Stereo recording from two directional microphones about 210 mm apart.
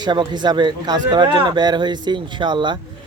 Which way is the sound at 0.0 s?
20° right (ahead or behind).